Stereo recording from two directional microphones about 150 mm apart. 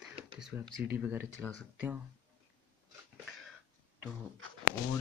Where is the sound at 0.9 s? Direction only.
10° right (ahead or behind).